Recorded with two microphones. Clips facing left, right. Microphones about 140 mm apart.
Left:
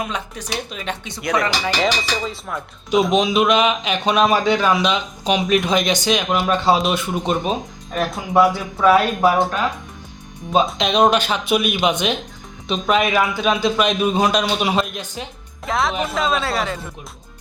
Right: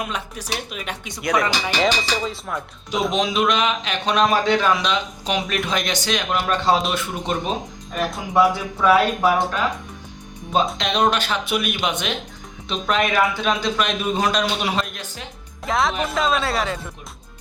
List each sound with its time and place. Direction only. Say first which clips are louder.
0.0 s speech: left 2 dB; 5° right (ahead or behind)
3.1 s a man's voice: left 1 dB; 10° left (ahead or behind)
10.8 s a man's voice: left 4 dB; 15° left (ahead or behind)
15.6 s speech: even; centre (ahead or behind)